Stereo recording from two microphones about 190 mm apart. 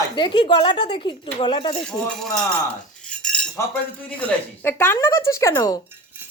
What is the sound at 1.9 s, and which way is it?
Speech, 5° left (ahead or behind).